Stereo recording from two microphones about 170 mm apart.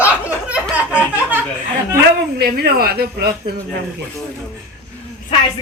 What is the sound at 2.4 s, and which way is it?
Speech, 65° right (ahead or behind).